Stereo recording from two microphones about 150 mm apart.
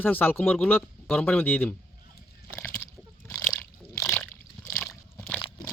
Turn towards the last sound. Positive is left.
turn(degrees=25)  # may be behind; listen again after turning